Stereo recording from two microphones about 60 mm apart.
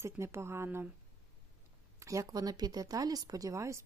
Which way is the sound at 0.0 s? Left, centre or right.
Right.